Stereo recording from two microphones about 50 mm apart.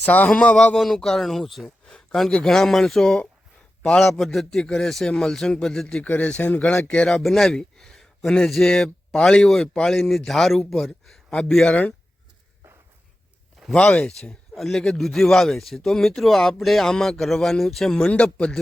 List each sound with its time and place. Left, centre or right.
0.0 s a man's voice: left
0.5 s speech: centre
1.9 s a sound: centre
2.3 s speech: centre
6.0 s speech: left
7.1 s a man's voice: centre
13.7 s speech: centre
14.5 s speech: centre
18.1 s speech: left